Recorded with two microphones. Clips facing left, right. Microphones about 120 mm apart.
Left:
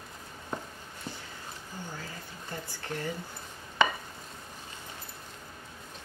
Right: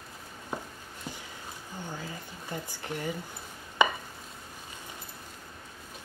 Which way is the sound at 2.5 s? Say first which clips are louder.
Right 2 dB; 15° right (ahead or behind).